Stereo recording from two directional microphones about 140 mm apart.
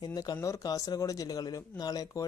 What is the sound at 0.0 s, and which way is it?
Speech, 30° left (ahead or behind).